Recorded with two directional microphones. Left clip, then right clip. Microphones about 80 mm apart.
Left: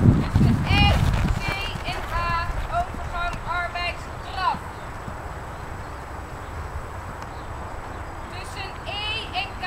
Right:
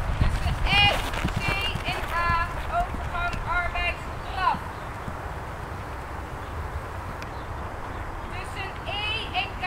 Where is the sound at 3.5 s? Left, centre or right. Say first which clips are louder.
Even; left.